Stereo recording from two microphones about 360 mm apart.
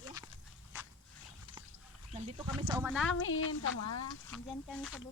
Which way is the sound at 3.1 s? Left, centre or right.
Left.